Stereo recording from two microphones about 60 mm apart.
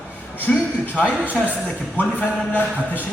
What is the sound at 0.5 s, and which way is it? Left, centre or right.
Speech, centre.